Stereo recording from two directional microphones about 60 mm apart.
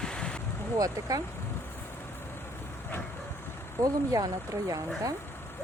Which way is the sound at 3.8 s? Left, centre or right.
Right.